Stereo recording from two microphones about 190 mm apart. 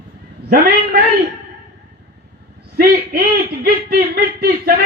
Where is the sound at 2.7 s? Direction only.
50° right (ahead or behind).